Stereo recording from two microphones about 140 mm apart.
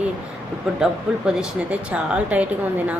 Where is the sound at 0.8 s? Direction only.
5° right (ahead or behind).